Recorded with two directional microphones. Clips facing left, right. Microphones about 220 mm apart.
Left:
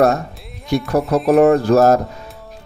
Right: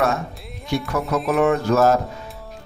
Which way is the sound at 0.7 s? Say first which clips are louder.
Left 6 dB; 35° left (ahead or behind).